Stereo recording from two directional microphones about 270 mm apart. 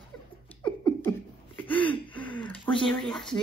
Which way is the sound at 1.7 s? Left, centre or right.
Centre.